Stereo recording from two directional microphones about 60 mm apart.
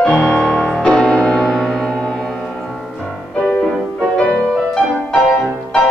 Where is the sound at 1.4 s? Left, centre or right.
Centre.